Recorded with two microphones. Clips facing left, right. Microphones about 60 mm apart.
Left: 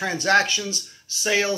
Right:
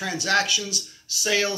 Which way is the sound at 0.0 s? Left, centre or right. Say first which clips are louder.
Left 4 dB; left.